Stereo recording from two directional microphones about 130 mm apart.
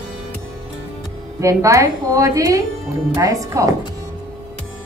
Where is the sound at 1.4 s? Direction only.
25° right (ahead or behind).